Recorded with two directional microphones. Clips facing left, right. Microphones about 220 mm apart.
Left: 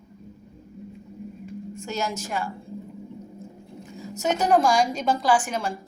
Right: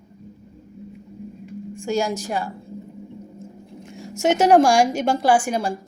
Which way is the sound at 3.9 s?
85° right.